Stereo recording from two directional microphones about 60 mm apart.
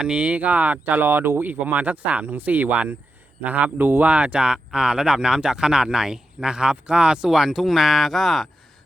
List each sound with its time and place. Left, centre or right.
0.0 s speech: centre